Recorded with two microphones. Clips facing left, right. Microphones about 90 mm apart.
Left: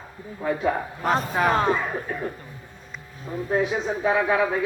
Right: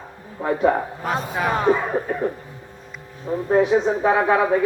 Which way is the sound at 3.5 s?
50° right (ahead or behind).